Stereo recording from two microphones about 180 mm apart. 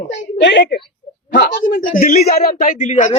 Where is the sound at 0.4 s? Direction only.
70° left (ahead or behind).